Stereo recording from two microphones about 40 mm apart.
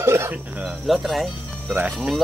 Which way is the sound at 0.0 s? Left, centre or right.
Right.